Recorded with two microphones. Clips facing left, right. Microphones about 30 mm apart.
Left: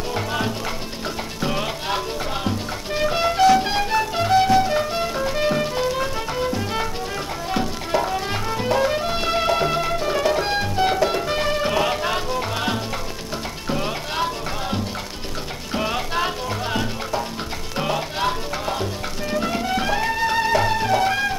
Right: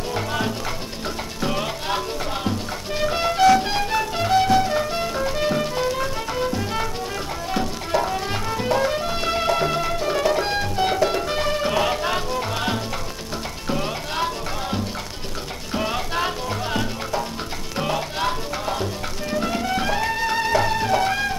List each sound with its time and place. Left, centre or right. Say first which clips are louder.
0.1 s speech: even; centre
1.4 s music: even; centre